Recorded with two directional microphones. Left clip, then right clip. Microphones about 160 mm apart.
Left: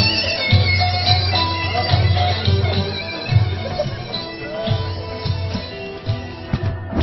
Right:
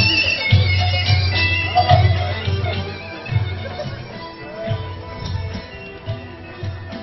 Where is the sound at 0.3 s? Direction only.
50° right (ahead or behind).